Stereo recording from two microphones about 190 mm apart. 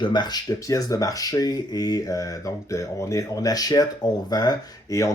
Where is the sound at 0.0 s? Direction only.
25° left (ahead or behind).